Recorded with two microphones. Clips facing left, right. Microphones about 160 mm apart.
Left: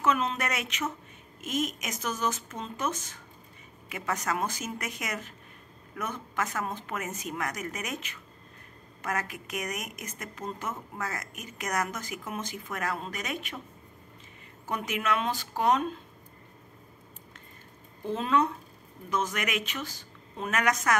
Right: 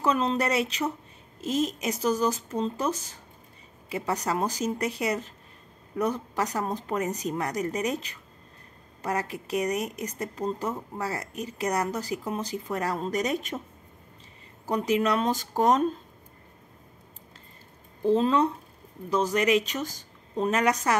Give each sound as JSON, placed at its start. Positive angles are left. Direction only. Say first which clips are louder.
{"t": 0.0, "sound": "a woman's voice", "louder": "right 3 dB", "side_deg": -30}
{"t": 14.7, "sound": "a woman's voice", "louder": "right 6 dB", "side_deg": -30}
{"t": 18.0, "sound": "a woman's voice", "louder": "right 5 dB", "side_deg": -30}